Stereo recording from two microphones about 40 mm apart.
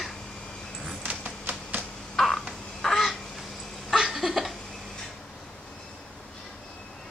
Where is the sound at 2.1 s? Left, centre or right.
Centre.